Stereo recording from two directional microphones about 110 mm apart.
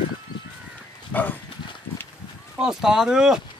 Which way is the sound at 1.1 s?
15° left (ahead or behind).